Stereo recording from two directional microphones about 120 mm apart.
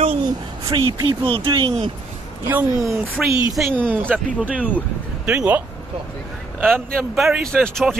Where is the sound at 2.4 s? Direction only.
20° right (ahead or behind).